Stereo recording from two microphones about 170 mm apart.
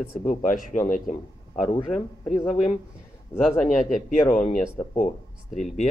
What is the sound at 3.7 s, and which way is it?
Speech, 50° left (ahead or behind).